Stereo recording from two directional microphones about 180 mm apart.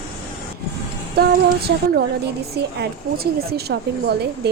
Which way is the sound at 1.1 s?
60° right (ahead or behind).